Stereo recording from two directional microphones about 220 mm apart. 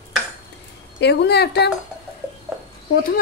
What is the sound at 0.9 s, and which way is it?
Speech, 50° left (ahead or behind).